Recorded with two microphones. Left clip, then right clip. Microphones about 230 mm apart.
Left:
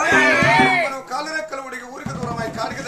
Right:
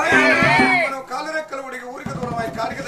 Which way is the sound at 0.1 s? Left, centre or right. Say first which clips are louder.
Even; centre.